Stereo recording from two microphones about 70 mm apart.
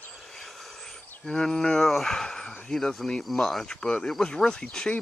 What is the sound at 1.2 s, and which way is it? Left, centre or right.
Speech, centre.